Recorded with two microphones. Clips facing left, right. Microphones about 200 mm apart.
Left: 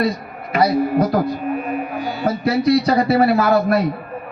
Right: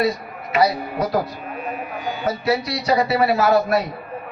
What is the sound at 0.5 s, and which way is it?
A man's voice, 55° left (ahead or behind).